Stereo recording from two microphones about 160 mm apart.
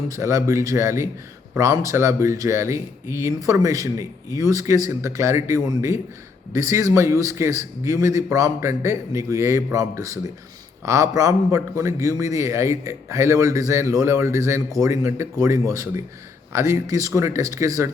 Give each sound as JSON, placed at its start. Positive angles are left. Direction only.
{"t": 0.1, "sound": "speech", "side_deg": -20}